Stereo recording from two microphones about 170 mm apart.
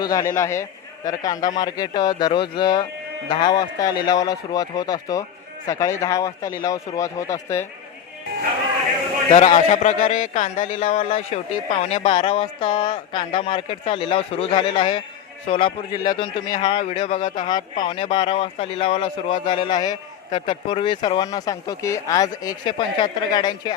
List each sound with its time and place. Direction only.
0.0 s a man's voice: 20° left (ahead or behind)
9.5 s speech: 45° left (ahead or behind); by 23.7 s 25° left (ahead or behind)